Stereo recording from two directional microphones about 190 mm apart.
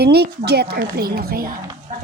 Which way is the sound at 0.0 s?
60° right (ahead or behind).